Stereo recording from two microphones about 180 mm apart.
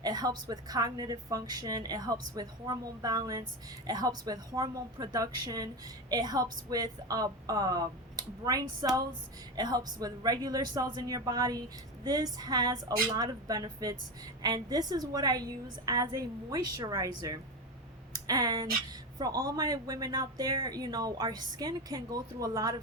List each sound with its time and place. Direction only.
0.0 s speech: 20° right (ahead or behind)